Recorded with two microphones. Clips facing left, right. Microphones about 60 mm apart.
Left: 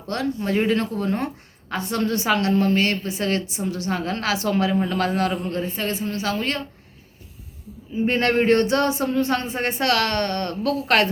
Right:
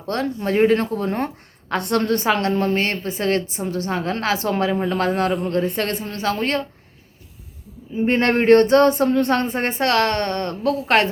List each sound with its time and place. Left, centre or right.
0.1 s a woman's voice: right
1.7 s a woman's voice: right
5.6 s a woman's voice: right
8.0 s a woman's voice: right